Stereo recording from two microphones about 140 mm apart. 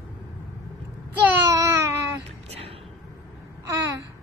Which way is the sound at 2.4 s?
45° right (ahead or behind).